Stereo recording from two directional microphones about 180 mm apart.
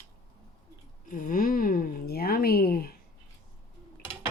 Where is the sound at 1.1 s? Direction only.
50° left (ahead or behind).